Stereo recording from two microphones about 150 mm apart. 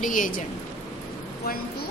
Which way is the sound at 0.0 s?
60° left (ahead or behind).